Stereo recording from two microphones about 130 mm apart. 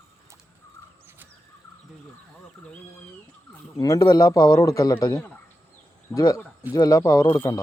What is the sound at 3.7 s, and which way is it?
Speech, 25° left (ahead or behind).